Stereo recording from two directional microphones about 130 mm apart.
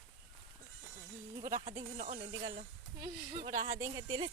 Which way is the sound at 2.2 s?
35° right (ahead or behind).